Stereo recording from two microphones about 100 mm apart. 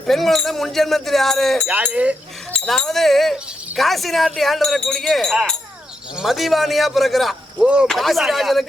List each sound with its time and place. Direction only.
0.0 s speech: centre (ahead or behind)
1.6 s speech: 15° right (ahead or behind)
2.6 s speech: 5° left (ahead or behind)